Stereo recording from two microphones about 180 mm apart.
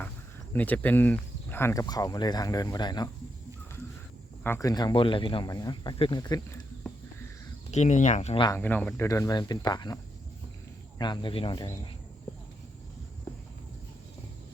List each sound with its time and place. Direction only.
0.5 s speech: 10° left (ahead or behind)
4.4 s speech: 15° left (ahead or behind)
7.7 s speech: 40° left (ahead or behind)
8.4 s speech: 10° left (ahead or behind); by 11.6 s 30° left (ahead or behind)